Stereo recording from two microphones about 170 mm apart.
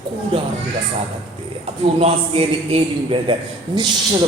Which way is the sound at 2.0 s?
35° right (ahead or behind).